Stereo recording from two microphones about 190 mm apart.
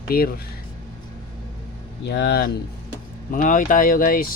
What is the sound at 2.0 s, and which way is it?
Speech, 60° left (ahead or behind).